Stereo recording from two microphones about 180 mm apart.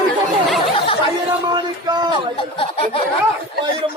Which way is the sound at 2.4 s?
30° left (ahead or behind).